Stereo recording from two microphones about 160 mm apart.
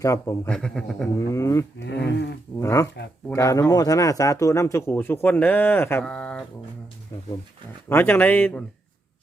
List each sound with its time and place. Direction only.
0.0 s speech: 20° left (ahead or behind)
0.4 s speech: 5° left (ahead or behind)
1.2 s speech: 20° left (ahead or behind)
1.8 s speech: 90° left
2.6 s a man's voice: 20° left (ahead or behind)
7.1 s speech: 25° left (ahead or behind)
7.9 s a man's voice: 15° left (ahead or behind)